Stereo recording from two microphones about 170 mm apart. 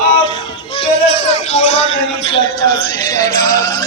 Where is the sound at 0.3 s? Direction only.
30° left (ahead or behind).